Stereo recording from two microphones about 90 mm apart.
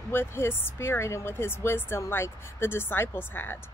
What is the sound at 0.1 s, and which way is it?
Speech, 25° left (ahead or behind).